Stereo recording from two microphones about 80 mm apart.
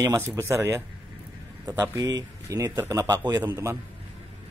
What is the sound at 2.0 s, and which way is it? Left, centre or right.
Speech, right.